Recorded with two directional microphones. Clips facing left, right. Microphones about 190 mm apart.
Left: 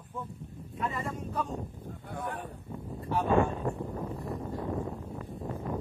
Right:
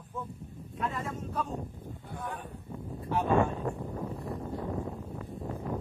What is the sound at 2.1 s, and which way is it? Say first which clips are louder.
Speech: left 2 dB; 60° left (ahead or behind).